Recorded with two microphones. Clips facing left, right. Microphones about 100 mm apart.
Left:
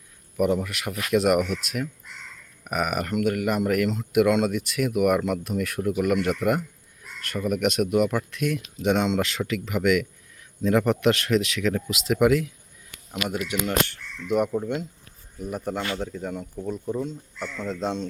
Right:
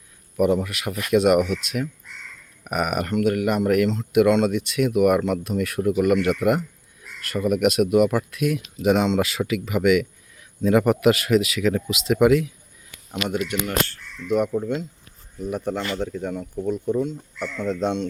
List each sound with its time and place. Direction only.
0.3 s speech: centre (ahead or behind)
13.7 s speech: 20° left (ahead or behind)
14.3 s speech: 5° left (ahead or behind)